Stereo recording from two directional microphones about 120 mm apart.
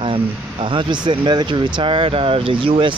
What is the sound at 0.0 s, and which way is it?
Speech, 45° right (ahead or behind).